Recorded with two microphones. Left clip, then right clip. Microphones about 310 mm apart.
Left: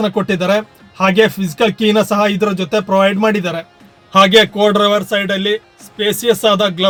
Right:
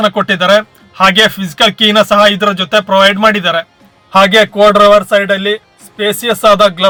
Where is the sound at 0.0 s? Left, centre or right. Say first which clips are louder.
Right 6 dB; centre.